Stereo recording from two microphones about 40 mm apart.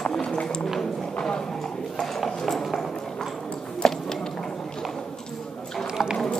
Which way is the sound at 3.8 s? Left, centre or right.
Centre.